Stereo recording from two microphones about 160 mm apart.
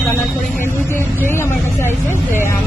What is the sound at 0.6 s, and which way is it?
Music, 15° left (ahead or behind).